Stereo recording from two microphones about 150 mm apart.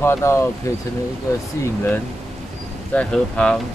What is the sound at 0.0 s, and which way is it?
Speech, 15° left (ahead or behind).